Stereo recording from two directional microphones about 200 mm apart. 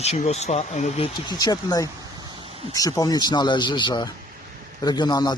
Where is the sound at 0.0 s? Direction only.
35° left (ahead or behind).